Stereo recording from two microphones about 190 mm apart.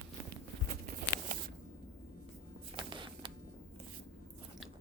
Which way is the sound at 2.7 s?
25° right (ahead or behind).